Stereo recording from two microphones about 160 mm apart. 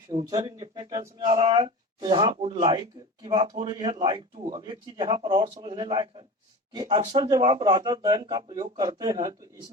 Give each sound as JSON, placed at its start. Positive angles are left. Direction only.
{"t": 0.1, "sound": "a man's voice", "side_deg": -30}